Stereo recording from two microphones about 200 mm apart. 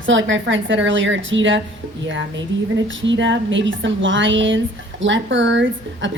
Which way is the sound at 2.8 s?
65° right (ahead or behind).